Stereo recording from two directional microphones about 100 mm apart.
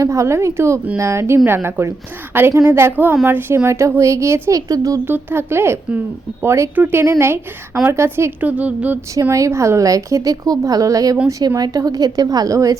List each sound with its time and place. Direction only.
0.0 s a woman's voice: 30° right (ahead or behind)
5.0 s a woman's voice: 20° right (ahead or behind)
6.7 s speech: 15° right (ahead or behind)
7.0 s a woman's voice: 25° right (ahead or behind)
9.3 s a woman's voice: 30° right (ahead or behind)